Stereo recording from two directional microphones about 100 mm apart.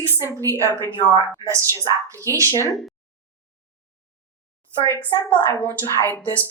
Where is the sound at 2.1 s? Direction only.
30° right (ahead or behind).